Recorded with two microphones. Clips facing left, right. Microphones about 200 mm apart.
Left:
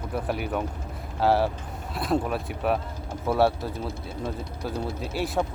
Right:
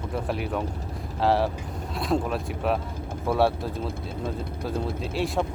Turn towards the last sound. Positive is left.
turn(degrees=0)  # may be behind; listen again after turning